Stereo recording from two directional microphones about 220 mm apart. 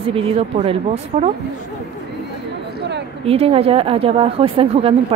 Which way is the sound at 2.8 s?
50° right (ahead or behind).